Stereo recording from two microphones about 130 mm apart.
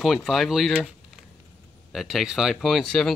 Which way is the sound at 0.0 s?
Centre (ahead or behind).